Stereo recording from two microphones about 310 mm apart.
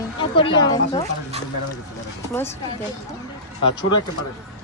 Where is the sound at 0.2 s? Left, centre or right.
Centre.